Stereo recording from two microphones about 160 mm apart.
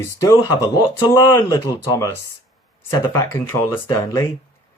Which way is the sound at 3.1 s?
15° left (ahead or behind).